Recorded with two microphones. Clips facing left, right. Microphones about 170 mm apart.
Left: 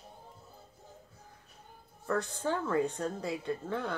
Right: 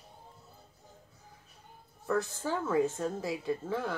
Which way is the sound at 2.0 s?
Centre (ahead or behind).